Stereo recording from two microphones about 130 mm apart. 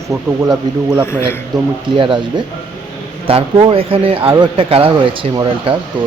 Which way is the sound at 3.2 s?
40° right (ahead or behind).